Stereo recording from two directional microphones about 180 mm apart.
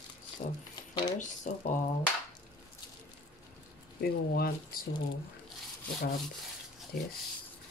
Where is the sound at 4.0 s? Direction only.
60° left (ahead or behind).